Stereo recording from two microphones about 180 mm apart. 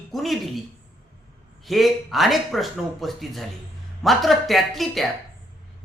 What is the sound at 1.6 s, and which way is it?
Speech, centre (ahead or behind).